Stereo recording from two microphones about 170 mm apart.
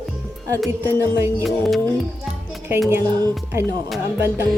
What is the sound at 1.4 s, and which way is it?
Speech, centre (ahead or behind).